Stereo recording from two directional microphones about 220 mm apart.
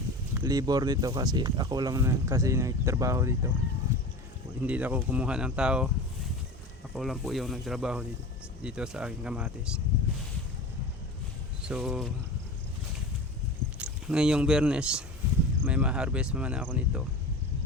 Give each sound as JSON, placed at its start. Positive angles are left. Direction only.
{"t": 0.3, "sound": "speech", "side_deg": -15}
{"t": 4.6, "sound": "speech", "side_deg": -5}
{"t": 6.9, "sound": "speech", "side_deg": 0}
{"t": 11.6, "sound": "speech", "side_deg": -5}
{"t": 13.7, "sound": "speech", "side_deg": -5}